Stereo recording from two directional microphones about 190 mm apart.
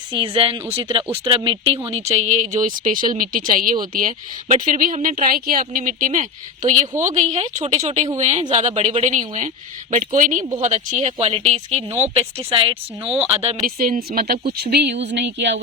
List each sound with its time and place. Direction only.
0.1 s speech: 30° right (ahead or behind)
13.7 s speech: 45° right (ahead or behind)
15.0 s a sound: 65° right (ahead or behind)